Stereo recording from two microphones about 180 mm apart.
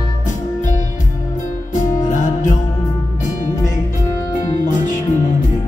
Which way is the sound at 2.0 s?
45° left (ahead or behind).